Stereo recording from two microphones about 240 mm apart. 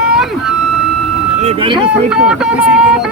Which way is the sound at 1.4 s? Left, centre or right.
Right.